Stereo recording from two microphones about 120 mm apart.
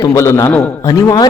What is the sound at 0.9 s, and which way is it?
Speech, 30° left (ahead or behind).